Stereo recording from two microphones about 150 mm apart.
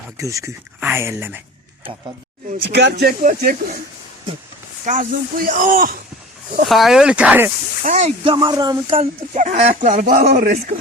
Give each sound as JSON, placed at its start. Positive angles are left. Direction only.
{"t": 0.2, "sound": "speech", "side_deg": -20}
{"t": 3.0, "sound": "speech", "side_deg": -85}
{"t": 4.9, "sound": "speech", "side_deg": -65}
{"t": 6.7, "sound": "speech", "side_deg": 0}
{"t": 7.9, "sound": "speech", "side_deg": -50}
{"t": 8.2, "sound": "speech", "side_deg": -30}
{"t": 9.0, "sound": "speech", "side_deg": -50}